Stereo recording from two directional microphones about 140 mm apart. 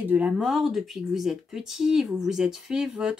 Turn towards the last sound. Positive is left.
turn(degrees=-5)  # may be behind; listen again after turning